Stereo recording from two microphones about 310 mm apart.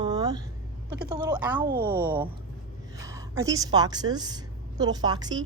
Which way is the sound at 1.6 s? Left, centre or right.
Right.